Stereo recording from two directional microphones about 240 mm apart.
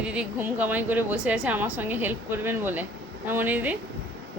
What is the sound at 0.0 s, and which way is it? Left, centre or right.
A woman's voice, centre.